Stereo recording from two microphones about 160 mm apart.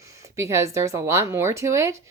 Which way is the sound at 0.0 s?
20° right (ahead or behind).